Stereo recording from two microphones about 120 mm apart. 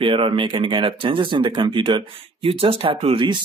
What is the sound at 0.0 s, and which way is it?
Speech, 45° right (ahead or behind).